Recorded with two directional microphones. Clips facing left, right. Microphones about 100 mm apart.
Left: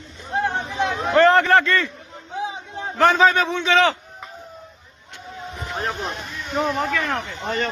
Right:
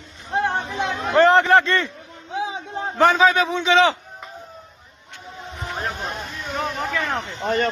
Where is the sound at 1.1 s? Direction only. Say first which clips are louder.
Right 1 dB; 20° right (ahead or behind).